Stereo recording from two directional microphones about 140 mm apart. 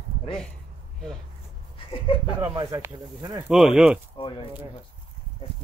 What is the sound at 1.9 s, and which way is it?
Speech, 40° left (ahead or behind).